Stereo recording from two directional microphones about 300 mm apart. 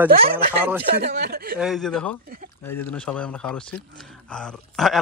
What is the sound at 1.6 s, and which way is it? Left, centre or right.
A man's voice, centre.